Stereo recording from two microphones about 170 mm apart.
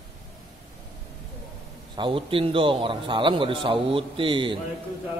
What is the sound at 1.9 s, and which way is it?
Speech, 30° right (ahead or behind).